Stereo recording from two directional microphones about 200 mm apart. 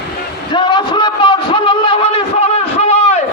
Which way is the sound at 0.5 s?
20° left (ahead or behind).